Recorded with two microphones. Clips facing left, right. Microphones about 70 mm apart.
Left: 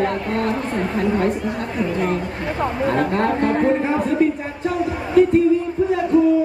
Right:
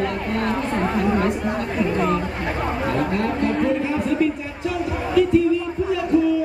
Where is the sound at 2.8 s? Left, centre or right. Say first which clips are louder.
Left 4 dB; left.